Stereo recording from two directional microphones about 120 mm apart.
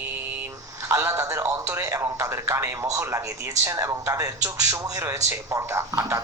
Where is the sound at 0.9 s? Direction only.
25° right (ahead or behind).